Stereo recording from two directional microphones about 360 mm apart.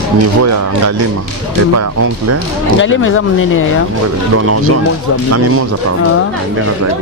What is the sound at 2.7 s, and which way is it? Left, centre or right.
Speech, left.